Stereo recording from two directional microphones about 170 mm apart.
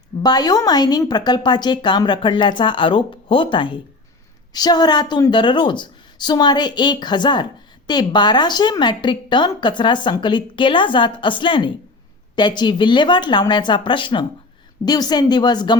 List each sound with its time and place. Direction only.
0.2 s a woman's voice: 25° left (ahead or behind)